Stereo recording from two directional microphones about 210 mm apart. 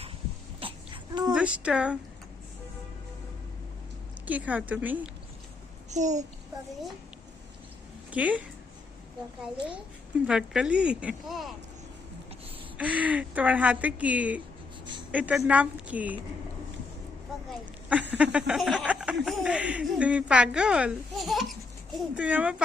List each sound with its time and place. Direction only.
0.6 s a sound: 25° right (ahead or behind)
1.3 s speech: 5° right (ahead or behind)
4.3 s speech: 5° right (ahead or behind)
5.9 s a child's voice: 35° right (ahead or behind)
8.1 s speech: 5° right (ahead or behind)
10.2 s speech: 5° right (ahead or behind)
12.7 s speech: 5° right (ahead or behind)
18.1 s speech: 5° right (ahead or behind)